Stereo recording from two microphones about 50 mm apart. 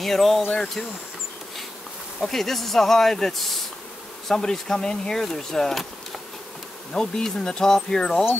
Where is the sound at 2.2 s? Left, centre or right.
Centre.